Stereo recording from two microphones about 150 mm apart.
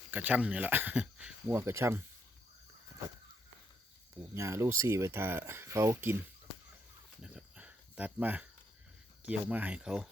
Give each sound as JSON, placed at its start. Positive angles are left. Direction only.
{"t": 0.1, "sound": "speech", "side_deg": -10}
{"t": 4.4, "sound": "speech", "side_deg": -20}
{"t": 7.2, "sound": "cricket", "side_deg": -5}
{"t": 9.2, "sound": "speech", "side_deg": -10}